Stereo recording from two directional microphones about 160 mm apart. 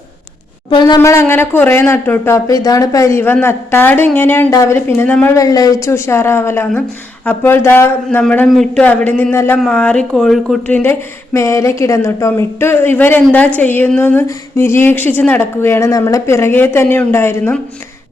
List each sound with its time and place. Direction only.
0.7 s speech: 30° left (ahead or behind); by 5.3 s 10° left (ahead or behind)
5.4 s speech: 20° left (ahead or behind)
11.3 s speech: 20° left (ahead or behind)